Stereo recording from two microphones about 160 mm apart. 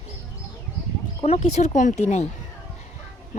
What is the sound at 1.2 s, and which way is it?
Speech, 45° left (ahead or behind).